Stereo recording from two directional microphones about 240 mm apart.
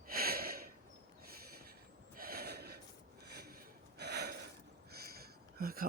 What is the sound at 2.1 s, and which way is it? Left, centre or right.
Gasp, right.